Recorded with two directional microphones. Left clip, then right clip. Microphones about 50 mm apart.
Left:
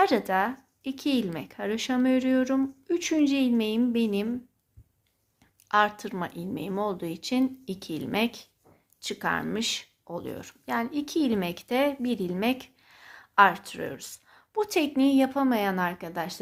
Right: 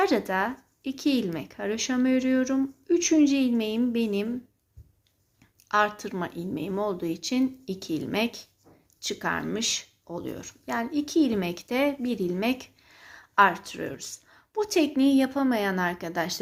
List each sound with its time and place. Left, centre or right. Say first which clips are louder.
0.0 s a woman's voice: left 1 dB; left
1.7 s a woman's voice: even; left
5.6 s a woman's voice: left 1 dB; left
7.6 s a woman's voice: right 3 dB; left
9.4 s speech: right 1 dB; left
10.7 s a woman's voice: right 1 dB; left
12.4 s a sound: even; left
13.5 s speech: even; left
13.9 s a sound: right 2 dB; left
14.5 s a woman's voice: even; left
14.8 s a woman's voice: right 1 dB; left
16.1 s a woman's voice: right 4 dB; centre